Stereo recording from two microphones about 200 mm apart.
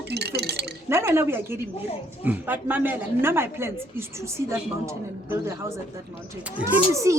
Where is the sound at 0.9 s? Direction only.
15° right (ahead or behind).